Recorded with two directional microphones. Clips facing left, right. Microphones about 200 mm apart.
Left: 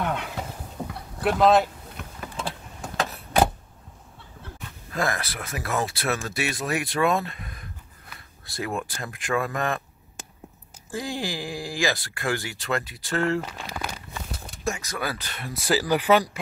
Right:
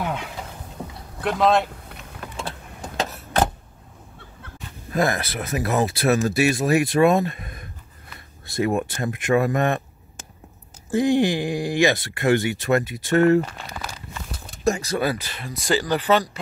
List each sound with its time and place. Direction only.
0.8 s a sound: 10° left (ahead or behind)
1.2 s speech: centre (ahead or behind)
1.9 s vehicle: 65° right (ahead or behind)
3.1 s vehicle: centre (ahead or behind)
4.9 s speech: 25° right (ahead or behind)
10.9 s speech: 20° right (ahead or behind)
14.6 s speech: 35° right (ahead or behind)
15.1 s speech: 5° right (ahead or behind)